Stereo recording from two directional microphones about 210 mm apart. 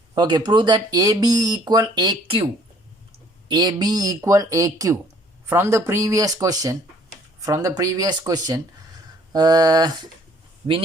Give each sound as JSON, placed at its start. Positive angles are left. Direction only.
{"t": 0.1, "sound": "speech", "side_deg": -20}
{"t": 3.5, "sound": "speech", "side_deg": -20}